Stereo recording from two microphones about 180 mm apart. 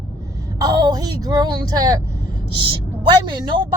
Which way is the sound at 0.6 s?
20° right (ahead or behind).